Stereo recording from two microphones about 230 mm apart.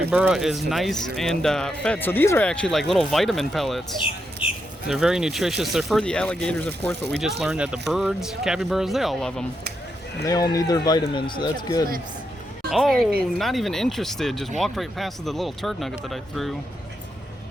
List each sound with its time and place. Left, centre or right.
0.1 s speech: centre
4.9 s speech: centre
10.2 s speech: centre
12.7 s speech: centre